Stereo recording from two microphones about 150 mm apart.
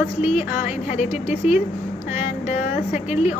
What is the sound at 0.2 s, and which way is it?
Speech, 45° left (ahead or behind).